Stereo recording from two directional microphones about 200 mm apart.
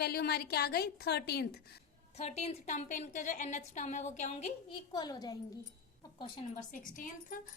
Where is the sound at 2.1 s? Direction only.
35° left (ahead or behind).